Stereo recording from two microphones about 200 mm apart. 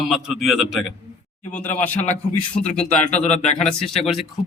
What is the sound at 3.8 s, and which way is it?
Speech, centre (ahead or behind).